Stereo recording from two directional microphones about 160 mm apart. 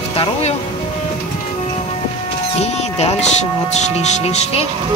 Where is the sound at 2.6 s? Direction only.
45° left (ahead or behind).